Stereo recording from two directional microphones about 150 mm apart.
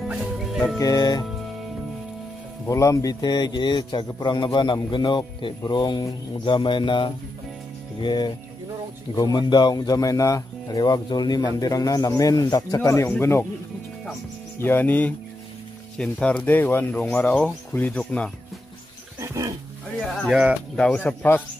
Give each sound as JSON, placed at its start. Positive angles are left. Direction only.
{"t": 0.1, "sound": "music", "side_deg": -5}
{"t": 0.7, "sound": "speech", "side_deg": 25}
{"t": 2.6, "sound": "a man's voice", "side_deg": 20}
{"t": 14.6, "sound": "speech", "side_deg": 15}
{"t": 19.1, "sound": "dog", "side_deg": -20}
{"t": 20.0, "sound": "speech", "side_deg": 5}